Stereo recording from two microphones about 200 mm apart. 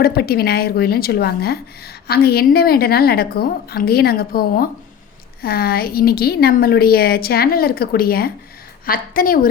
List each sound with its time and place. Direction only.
0.0 s a woman's voice: 50° left (ahead or behind)